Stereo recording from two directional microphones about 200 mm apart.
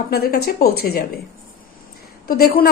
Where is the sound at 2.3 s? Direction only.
45° left (ahead or behind).